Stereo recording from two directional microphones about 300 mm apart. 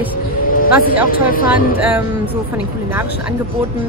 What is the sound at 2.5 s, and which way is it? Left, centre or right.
Speech, centre.